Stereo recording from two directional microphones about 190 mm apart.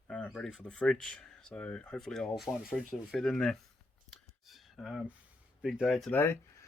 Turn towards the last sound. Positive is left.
turn(degrees=15)  # may be behind; listen again after turning